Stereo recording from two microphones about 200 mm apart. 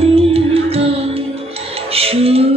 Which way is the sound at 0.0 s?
30° right (ahead or behind).